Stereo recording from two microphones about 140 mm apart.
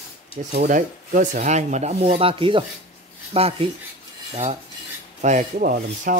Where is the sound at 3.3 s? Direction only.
45° right (ahead or behind).